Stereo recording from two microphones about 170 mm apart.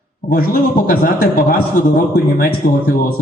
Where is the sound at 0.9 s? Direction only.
60° left (ahead or behind).